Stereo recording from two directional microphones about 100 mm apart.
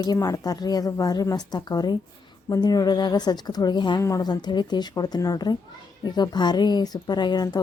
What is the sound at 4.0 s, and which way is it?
A woman's voice, 35° left (ahead or behind).